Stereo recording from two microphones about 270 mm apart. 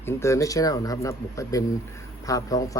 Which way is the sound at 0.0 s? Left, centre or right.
Centre.